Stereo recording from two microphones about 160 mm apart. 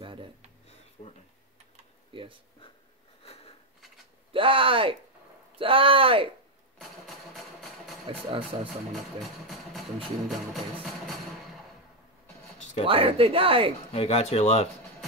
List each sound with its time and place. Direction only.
0.0 s a sound: 35° right (ahead or behind)
2.1 s a man's voice: 30° right (ahead or behind)
3.2 s sniff: 35° left (ahead or behind)
4.3 s a man's voice: 35° right (ahead or behind)
6.8 s a sound: centre (ahead or behind)
8.1 s a man's voice: 35° right (ahead or behind)
8.9 s music: centre (ahead or behind)
12.8 s a man's voice: 35° right (ahead or behind)
13.9 s speech: 40° left (ahead or behind)